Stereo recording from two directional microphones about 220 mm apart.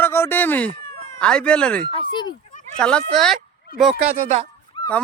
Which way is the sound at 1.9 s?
20° left (ahead or behind).